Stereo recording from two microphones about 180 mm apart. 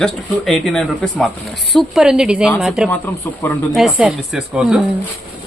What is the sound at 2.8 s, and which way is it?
Speech, 10° left (ahead or behind).